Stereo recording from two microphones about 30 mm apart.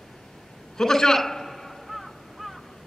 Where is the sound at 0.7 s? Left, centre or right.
Centre.